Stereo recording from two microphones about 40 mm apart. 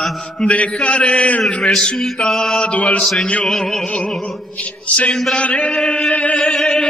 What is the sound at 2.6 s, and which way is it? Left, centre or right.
Mantra, left.